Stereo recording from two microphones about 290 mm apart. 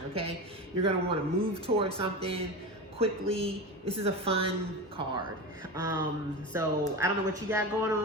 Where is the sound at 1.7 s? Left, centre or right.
Centre.